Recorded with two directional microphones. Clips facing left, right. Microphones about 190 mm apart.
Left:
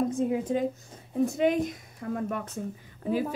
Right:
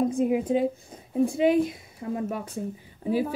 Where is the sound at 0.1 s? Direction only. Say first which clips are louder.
Right 3 dB; 15° right (ahead or behind).